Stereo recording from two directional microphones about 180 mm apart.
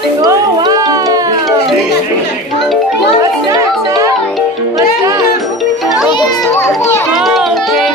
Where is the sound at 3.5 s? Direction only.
20° right (ahead or behind).